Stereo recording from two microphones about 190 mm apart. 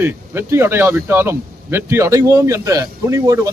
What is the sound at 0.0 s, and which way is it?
Speech, 10° right (ahead or behind).